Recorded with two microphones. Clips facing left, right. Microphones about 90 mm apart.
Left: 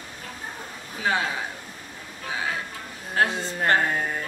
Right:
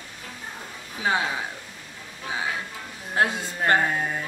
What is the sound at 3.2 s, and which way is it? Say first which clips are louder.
Speech: even; 20° right (ahead or behind).